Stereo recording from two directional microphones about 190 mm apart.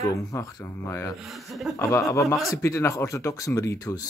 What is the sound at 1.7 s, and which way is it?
Speech, 15° left (ahead or behind).